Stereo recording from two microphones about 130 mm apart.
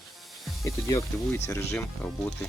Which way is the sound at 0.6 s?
25° left (ahead or behind).